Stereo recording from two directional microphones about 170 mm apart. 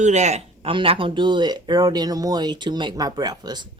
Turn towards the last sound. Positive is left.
turn(degrees=-25)  # may be behind; listen again after turning